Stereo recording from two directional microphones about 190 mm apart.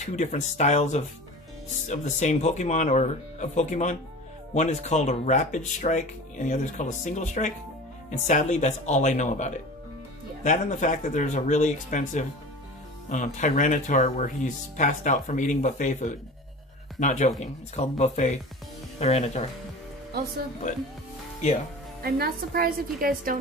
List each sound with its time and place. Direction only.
0.0 s speech: 40° left (ahead or behind)
22.0 s a woman's voice: 55° right (ahead or behind)